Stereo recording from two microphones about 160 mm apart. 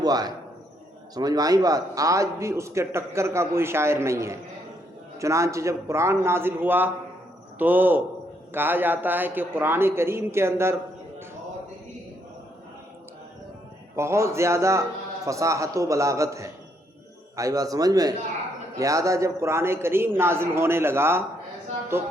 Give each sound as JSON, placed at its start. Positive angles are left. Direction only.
{"t": 0.0, "sound": "a man's voice", "side_deg": -25}
{"t": 13.9, "sound": "a man's voice", "side_deg": -15}